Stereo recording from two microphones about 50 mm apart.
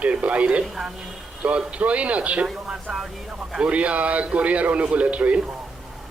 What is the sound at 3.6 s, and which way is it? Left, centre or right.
A man's voice, right.